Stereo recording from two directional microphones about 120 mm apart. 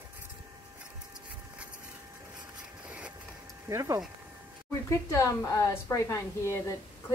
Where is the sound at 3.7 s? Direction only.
30° right (ahead or behind).